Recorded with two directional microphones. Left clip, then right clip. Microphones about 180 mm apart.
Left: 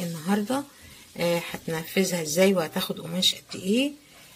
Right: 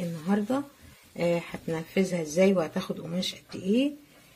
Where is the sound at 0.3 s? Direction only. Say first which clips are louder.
Left 2 dB; 5° left (ahead or behind).